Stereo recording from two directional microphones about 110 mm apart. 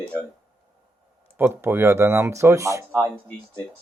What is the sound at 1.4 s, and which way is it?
Speech, 20° right (ahead or behind).